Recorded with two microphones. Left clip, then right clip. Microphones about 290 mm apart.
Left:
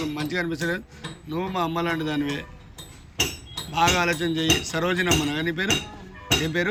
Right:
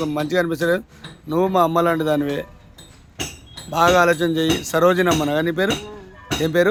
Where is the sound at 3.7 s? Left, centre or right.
Right.